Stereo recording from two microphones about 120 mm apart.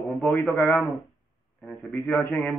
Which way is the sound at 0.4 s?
20° left (ahead or behind).